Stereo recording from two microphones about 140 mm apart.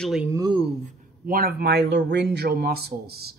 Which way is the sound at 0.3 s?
25° right (ahead or behind).